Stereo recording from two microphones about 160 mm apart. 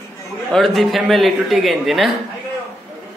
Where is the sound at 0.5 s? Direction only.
Centre (ahead or behind).